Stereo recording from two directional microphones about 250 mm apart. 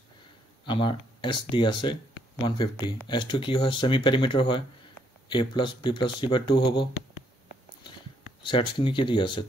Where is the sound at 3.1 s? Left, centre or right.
Centre.